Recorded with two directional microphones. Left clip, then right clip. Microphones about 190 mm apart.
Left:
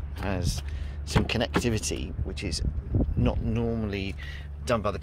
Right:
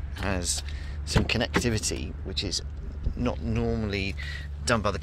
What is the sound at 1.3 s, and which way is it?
Speech, 10° left (ahead or behind).